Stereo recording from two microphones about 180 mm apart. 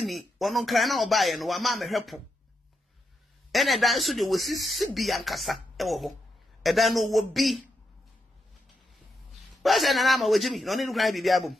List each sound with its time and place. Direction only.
0.0 s speech: centre (ahead or behind)
3.5 s speech: centre (ahead or behind)
9.3 s speech: centre (ahead or behind)